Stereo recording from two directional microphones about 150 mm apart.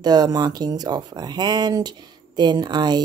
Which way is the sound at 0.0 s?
25° right (ahead or behind).